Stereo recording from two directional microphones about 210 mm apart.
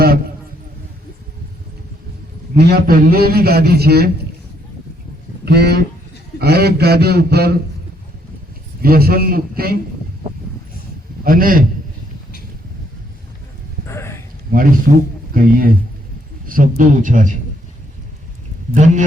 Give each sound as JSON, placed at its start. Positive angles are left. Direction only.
{"t": 2.6, "sound": "a man's voice", "side_deg": -50}
{"t": 5.5, "sound": "a man's voice", "side_deg": -50}
{"t": 8.8, "sound": "a man's voice", "side_deg": -45}
{"t": 11.2, "sound": "a man's voice", "side_deg": -40}
{"t": 13.8, "sound": "a sound", "side_deg": 15}
{"t": 14.9, "sound": "a man's voice", "side_deg": -40}
{"t": 18.7, "sound": "a man's voice", "side_deg": -35}